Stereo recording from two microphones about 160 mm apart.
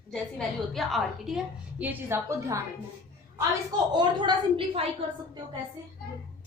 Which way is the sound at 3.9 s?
25° right (ahead or behind).